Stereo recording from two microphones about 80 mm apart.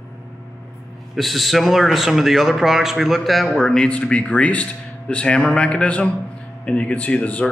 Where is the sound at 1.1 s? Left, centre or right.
Centre.